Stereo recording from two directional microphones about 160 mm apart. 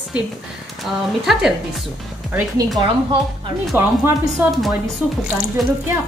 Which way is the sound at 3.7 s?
15° right (ahead or behind).